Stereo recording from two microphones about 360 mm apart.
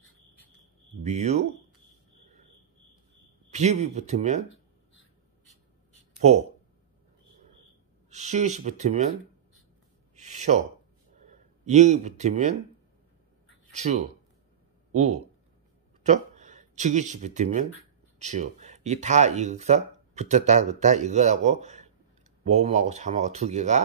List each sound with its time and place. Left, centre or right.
1.0 s speech: centre
3.5 s speech: centre
6.2 s speech: centre
8.1 s speech: centre
10.1 s a sound: centre
11.1 s speech: centre
13.7 s speech: centre